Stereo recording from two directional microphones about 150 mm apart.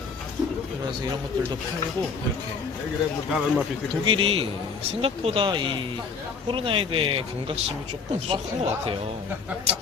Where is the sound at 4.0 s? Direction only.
35° right (ahead or behind).